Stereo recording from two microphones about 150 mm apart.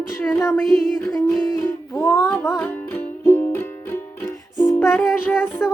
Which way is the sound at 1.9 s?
20° left (ahead or behind).